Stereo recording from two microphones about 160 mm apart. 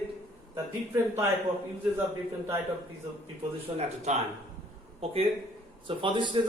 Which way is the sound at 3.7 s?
45° right (ahead or behind).